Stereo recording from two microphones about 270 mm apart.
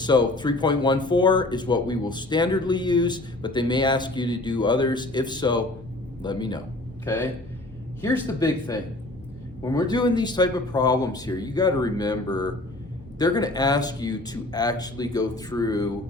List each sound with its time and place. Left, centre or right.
0.0 s a man's voice: centre